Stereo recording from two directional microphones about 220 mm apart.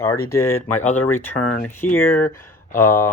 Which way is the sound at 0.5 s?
90° left.